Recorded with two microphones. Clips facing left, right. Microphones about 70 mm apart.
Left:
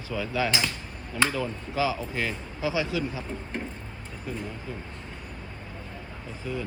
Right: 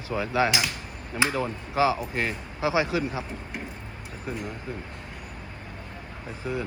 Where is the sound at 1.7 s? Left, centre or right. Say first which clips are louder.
Right 5 dB; right.